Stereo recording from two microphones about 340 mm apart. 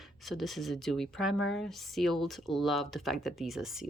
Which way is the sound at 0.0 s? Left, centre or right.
Centre.